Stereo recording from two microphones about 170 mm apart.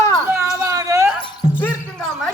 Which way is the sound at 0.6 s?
20° right (ahead or behind).